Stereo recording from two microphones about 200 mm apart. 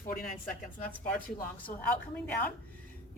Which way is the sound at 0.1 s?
45° left (ahead or behind).